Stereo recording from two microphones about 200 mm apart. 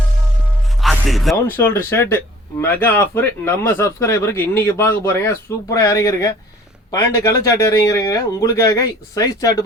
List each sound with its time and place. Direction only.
0.8 s music: centre (ahead or behind)
1.5 s speech: 10° left (ahead or behind)